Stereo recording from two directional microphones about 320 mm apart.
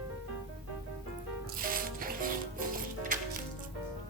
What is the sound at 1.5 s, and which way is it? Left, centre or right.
Music, right.